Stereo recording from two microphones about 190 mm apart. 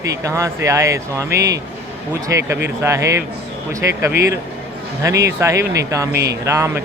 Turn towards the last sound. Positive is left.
turn(degrees=-15)  # may be behind; listen again after turning